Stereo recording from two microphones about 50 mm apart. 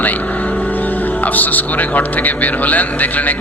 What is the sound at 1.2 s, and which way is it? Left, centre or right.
Speech, left.